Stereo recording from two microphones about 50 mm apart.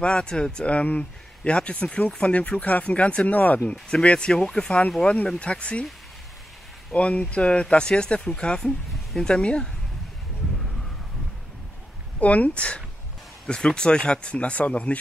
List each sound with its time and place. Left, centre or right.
0.0 s speech: centre
3.7 s speech: left
6.9 s speech: left
8.5 s speech: centre
12.2 s speech: left